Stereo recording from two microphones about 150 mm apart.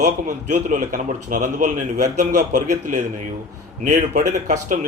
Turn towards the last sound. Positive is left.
turn(degrees=-55)  # may be behind; listen again after turning